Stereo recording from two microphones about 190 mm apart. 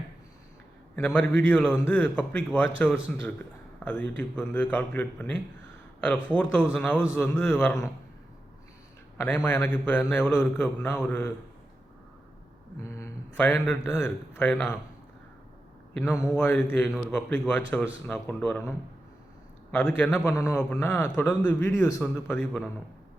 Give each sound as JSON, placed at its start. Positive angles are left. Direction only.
{"t": 0.9, "sound": "a man's voice", "side_deg": 10}
{"t": 9.1, "sound": "a man's voice", "side_deg": 10}
{"t": 12.8, "sound": "a man's voice", "side_deg": 15}
{"t": 16.0, "sound": "a man's voice", "side_deg": 10}
{"t": 19.7, "sound": "a man's voice", "side_deg": 10}